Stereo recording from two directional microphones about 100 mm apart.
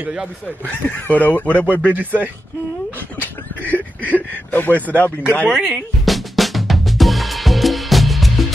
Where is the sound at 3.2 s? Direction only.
15° left (ahead or behind).